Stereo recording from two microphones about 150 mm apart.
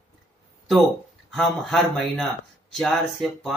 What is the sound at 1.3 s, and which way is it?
Speech, centre (ahead or behind).